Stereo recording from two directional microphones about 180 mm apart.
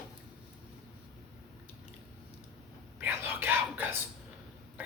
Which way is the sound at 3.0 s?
10° right (ahead or behind).